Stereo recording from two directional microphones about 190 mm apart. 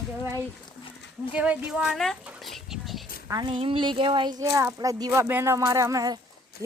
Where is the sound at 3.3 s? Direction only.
25° right (ahead or behind).